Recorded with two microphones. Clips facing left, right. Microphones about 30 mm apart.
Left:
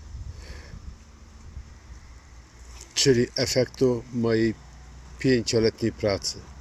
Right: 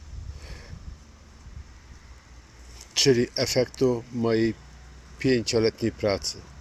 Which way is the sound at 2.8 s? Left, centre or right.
Centre.